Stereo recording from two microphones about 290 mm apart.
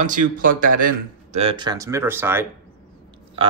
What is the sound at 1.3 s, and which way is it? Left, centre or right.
Speech, centre.